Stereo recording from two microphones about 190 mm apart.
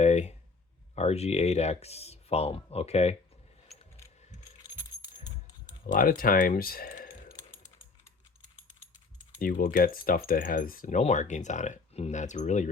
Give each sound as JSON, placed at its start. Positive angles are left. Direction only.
{"t": 0.0, "sound": "a sound", "side_deg": 35}
{"t": 0.9, "sound": "speech", "side_deg": 35}
{"t": 5.8, "sound": "speech", "side_deg": 50}
{"t": 9.4, "sound": "speech", "side_deg": 45}